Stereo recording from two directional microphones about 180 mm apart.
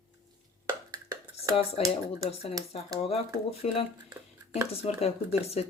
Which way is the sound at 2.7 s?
35° left (ahead or behind).